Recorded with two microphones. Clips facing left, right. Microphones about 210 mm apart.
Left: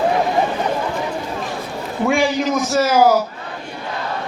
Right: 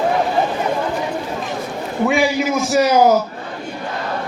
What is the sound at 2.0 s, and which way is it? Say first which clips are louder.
A man's voice: even; 5° right (ahead or behind).